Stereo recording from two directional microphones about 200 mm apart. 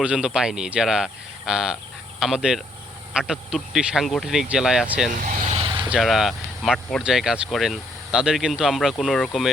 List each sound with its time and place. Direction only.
0.0 s speech: 5° right (ahead or behind)
5.2 s vehicle: 35° right (ahead or behind)
5.9 s speech: centre (ahead or behind)